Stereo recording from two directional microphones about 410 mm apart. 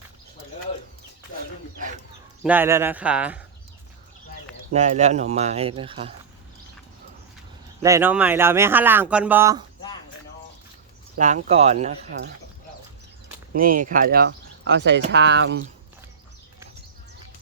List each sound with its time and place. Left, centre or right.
2.4 s speech: centre
4.7 s speech: centre
7.8 s speech: centre
11.2 s speech: centre
13.7 s speech: centre